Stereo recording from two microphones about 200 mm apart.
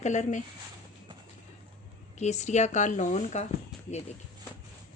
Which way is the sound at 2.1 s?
35° left (ahead or behind).